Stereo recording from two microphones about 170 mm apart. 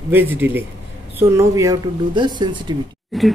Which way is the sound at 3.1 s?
Centre (ahead or behind).